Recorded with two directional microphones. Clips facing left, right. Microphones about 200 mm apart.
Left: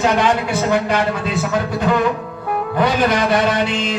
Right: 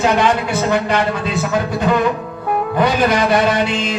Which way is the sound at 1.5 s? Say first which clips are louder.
Right 2 dB; 20° right (ahead or behind).